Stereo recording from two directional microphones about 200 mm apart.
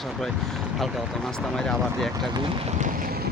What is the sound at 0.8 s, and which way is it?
Speech, centre (ahead or behind).